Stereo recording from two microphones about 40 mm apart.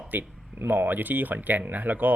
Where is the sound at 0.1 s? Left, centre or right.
Right.